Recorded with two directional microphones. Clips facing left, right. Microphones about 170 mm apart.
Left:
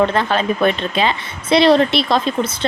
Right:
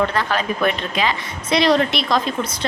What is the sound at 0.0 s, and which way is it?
A woman's voice, 25° left (ahead or behind).